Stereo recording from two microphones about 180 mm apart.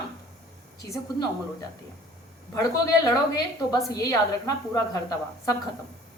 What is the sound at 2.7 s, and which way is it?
A woman's voice, 20° left (ahead or behind).